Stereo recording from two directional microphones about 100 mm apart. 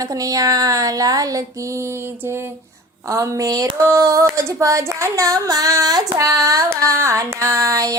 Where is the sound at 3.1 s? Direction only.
35° right (ahead or behind).